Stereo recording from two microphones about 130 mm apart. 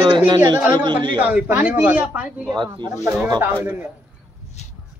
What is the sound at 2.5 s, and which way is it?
Speech, 35° right (ahead or behind).